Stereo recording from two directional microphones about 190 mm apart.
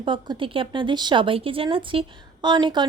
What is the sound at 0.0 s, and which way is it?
Speech, 25° right (ahead or behind).